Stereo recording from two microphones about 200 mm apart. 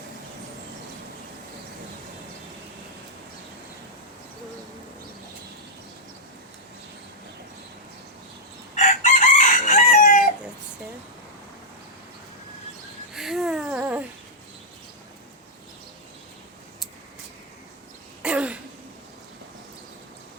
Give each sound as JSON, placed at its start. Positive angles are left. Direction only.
{"t": 8.7, "sound": "chicken", "side_deg": 40}
{"t": 13.1, "sound": "a sound", "side_deg": 0}
{"t": 18.2, "sound": "throat clearing", "side_deg": -5}